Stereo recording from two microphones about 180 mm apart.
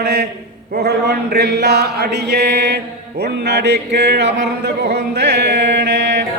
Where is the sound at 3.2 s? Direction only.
70° right (ahead or behind).